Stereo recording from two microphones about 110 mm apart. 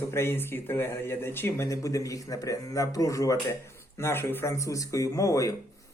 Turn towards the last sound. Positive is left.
turn(degrees=30)  # may be behind; listen again after turning